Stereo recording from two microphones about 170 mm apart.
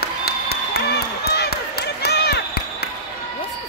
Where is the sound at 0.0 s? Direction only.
65° left (ahead or behind).